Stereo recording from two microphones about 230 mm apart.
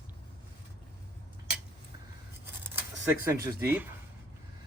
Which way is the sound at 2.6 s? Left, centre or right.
Centre.